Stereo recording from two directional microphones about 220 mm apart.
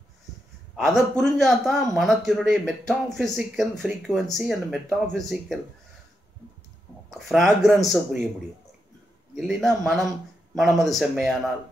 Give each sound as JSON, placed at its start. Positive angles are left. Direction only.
{"t": 0.7, "sound": "a man's voice", "side_deg": 0}
{"t": 7.1, "sound": "a man's voice", "side_deg": 0}
{"t": 9.3, "sound": "a man's voice", "side_deg": 0}